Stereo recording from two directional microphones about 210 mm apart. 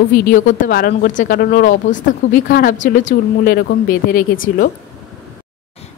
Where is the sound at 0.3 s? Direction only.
40° left (ahead or behind).